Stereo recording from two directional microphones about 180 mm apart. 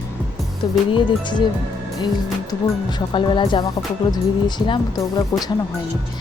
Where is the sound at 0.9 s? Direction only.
25° left (ahead or behind).